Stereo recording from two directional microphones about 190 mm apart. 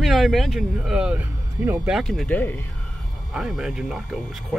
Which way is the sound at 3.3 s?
5° right (ahead or behind).